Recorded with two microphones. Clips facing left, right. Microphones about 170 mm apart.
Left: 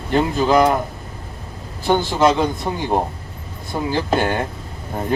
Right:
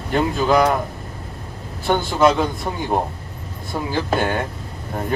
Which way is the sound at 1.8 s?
Centre (ahead or behind).